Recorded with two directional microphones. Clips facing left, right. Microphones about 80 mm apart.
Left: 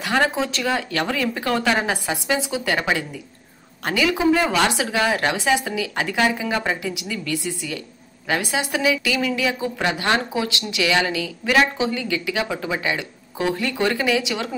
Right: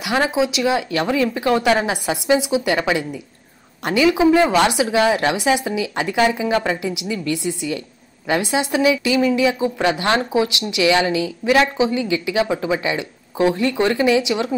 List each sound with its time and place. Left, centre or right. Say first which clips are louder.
0.0 s speech: right 2 dB; centre